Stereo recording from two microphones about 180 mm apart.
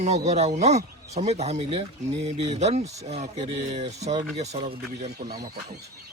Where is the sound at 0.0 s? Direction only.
40° right (ahead or behind).